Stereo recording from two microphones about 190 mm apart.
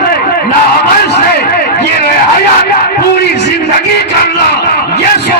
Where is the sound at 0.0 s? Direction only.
55° left (ahead or behind).